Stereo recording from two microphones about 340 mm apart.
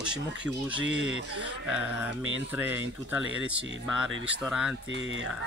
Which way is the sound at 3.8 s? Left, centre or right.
Centre.